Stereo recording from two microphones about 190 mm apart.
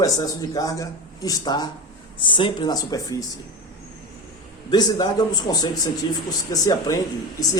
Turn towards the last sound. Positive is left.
turn(degrees=20)  # may be behind; listen again after turning